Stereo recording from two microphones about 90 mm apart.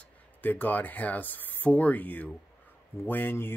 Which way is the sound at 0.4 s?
20° left (ahead or behind).